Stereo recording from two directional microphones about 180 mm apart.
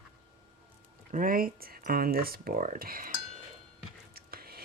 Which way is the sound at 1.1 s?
50° right (ahead or behind).